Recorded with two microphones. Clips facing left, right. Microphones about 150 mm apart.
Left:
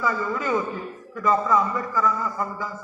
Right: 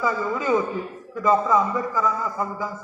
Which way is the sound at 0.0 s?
20° right (ahead or behind).